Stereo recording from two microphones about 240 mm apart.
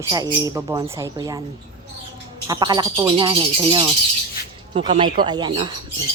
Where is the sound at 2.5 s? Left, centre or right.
Centre.